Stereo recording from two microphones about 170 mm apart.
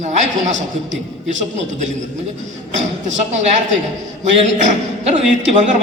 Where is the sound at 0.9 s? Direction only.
90° right.